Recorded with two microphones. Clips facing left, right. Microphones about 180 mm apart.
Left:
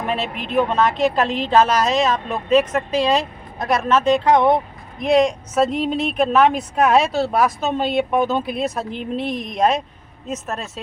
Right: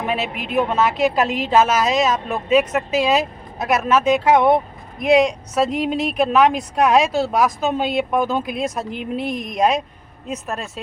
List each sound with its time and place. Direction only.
0.0 s a woman's voice: 5° right (ahead or behind)
9.2 s speech: 50° right (ahead or behind)
9.5 s speech: centre (ahead or behind)